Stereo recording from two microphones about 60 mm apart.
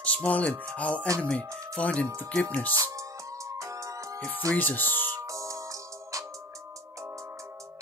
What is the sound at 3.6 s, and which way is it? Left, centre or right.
Music, right.